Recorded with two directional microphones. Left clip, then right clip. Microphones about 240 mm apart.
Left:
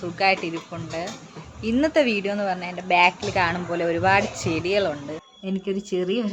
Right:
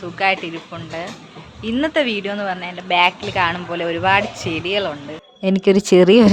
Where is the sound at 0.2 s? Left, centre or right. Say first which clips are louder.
Right 3 dB; centre.